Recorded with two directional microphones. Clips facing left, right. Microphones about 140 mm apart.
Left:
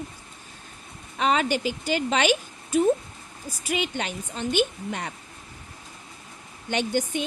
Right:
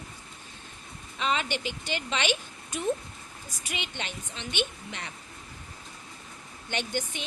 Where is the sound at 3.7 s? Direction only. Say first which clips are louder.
Left 9 dB; 45° left (ahead or behind).